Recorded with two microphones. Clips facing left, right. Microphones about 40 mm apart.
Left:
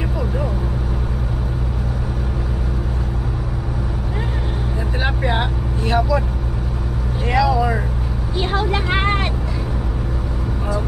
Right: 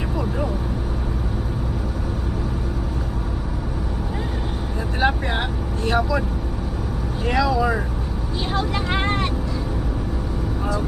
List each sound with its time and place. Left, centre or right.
5.0 s vehicle: centre
7.3 s vehicle: centre
8.4 s vehicle: left